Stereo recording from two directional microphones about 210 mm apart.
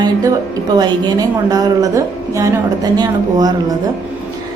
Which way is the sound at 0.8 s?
20° right (ahead or behind).